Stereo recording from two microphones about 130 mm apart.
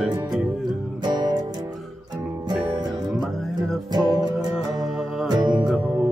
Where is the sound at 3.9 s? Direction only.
30° right (ahead or behind).